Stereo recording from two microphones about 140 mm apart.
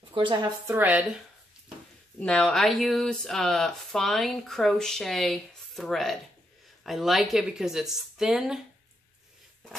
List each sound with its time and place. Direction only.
0.1 s a woman's voice: 35° right (ahead or behind)
0.7 s speech: 15° right (ahead or behind)
2.1 s speech: 5° left (ahead or behind)